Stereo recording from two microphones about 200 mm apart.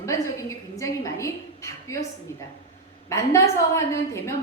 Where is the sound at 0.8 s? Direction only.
15° left (ahead or behind).